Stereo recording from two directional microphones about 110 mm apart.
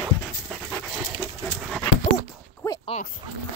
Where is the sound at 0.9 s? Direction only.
5° right (ahead or behind).